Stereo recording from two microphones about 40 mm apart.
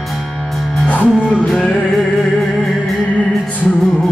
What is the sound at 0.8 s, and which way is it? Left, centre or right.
Music, left.